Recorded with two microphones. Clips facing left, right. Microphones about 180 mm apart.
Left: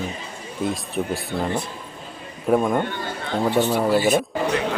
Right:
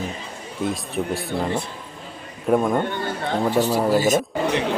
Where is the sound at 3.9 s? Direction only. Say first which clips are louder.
Even; 40° right (ahead or behind).